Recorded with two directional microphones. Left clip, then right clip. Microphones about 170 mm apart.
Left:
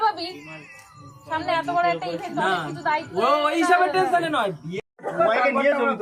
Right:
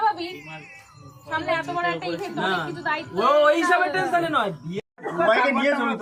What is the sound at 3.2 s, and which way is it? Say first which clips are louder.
A man's voice: right 4 dB; 30° left (ahead or behind).